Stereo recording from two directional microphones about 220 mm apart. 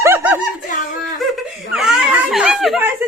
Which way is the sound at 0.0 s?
10° right (ahead or behind).